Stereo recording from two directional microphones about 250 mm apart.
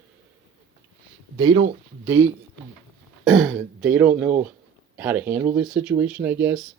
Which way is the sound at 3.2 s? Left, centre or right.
Centre.